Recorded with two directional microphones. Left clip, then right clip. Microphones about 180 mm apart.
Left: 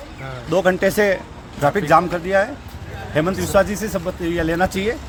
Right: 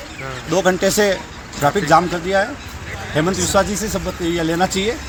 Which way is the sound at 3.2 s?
20° left (ahead or behind).